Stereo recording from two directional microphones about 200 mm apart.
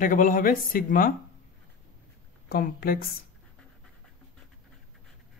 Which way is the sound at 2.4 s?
50° left (ahead or behind).